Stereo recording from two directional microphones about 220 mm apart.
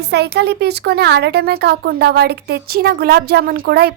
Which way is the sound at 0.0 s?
50° right (ahead or behind).